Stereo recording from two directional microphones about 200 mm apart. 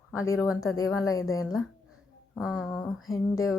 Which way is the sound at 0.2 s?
15° left (ahead or behind).